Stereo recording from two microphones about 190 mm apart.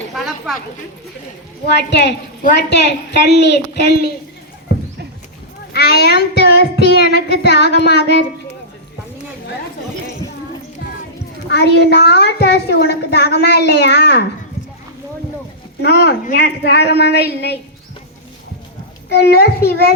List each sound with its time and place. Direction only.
0.1 s a sound: centre (ahead or behind)
1.9 s a child's voice: 60° left (ahead or behind)
5.7 s a child's voice: 60° left (ahead or behind)
11.4 s a child's voice: 60° left (ahead or behind)
15.8 s a child's voice: 65° left (ahead or behind)
19.0 s a child's voice: 60° left (ahead or behind)